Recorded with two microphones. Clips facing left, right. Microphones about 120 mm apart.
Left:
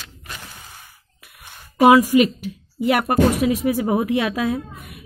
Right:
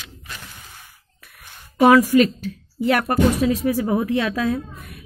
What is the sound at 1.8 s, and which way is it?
A woman's voice, 10° left (ahead or behind).